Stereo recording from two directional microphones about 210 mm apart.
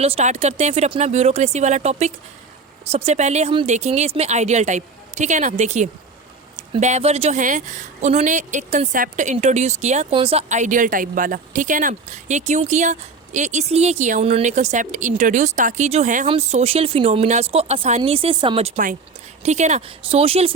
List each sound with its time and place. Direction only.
0.0 s speech: 30° right (ahead or behind)